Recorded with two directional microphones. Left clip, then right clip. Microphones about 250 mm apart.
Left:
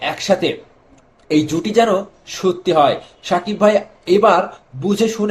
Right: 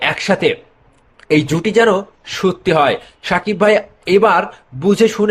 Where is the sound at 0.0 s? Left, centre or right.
Right.